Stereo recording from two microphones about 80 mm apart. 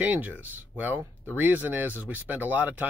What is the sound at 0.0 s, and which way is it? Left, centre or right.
Speech, right.